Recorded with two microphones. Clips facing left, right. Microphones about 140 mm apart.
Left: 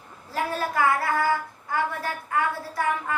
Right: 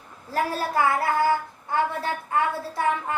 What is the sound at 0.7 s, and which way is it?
Child singing, 25° right (ahead or behind).